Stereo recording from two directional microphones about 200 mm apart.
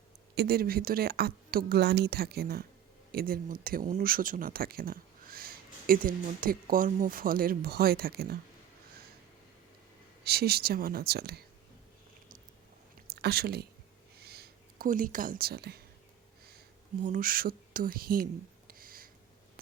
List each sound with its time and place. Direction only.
0.3 s speech: 50° right (ahead or behind)
10.2 s speech: 50° right (ahead or behind)
13.2 s speech: 50° right (ahead or behind)
14.2 s a sound: 50° right (ahead or behind)
16.5 s speech: 45° right (ahead or behind)
18.7 s a sound: 45° right (ahead or behind)